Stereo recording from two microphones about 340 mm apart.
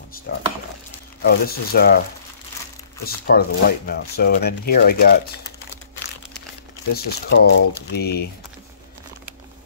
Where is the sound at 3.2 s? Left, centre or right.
Left.